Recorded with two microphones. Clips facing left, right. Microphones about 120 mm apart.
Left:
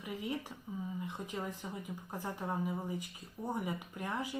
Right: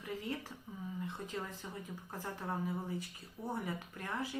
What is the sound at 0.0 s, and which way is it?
Speech, 15° left (ahead or behind).